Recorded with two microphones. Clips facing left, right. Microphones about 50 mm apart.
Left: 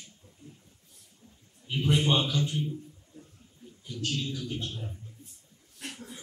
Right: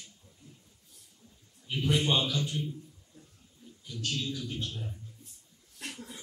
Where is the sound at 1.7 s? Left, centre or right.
Left.